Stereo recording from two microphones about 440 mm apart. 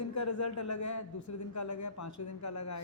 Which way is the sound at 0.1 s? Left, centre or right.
Left.